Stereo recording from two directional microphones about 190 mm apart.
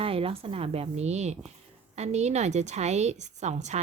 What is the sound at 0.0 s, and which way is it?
A woman's voice, 30° right (ahead or behind).